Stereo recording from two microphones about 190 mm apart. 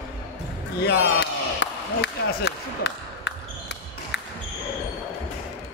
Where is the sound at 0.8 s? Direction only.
70° left (ahead or behind).